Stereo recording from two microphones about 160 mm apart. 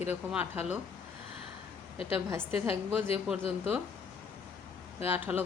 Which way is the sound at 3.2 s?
5° right (ahead or behind).